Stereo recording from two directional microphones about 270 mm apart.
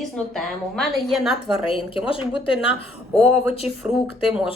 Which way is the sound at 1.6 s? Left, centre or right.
Centre.